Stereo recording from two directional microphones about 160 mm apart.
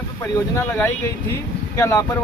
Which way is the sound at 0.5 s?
15° left (ahead or behind).